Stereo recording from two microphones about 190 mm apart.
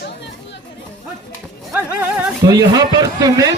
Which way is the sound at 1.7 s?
10° right (ahead or behind).